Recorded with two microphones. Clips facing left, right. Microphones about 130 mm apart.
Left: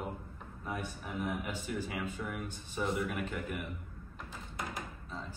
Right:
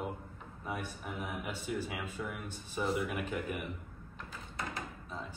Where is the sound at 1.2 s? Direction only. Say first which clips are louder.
Left 1 dB; centre (ahead or behind).